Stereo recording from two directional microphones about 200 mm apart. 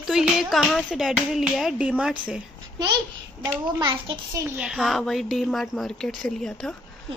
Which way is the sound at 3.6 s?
20° right (ahead or behind).